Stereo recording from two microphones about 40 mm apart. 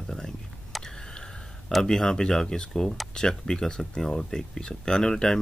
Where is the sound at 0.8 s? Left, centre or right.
Centre.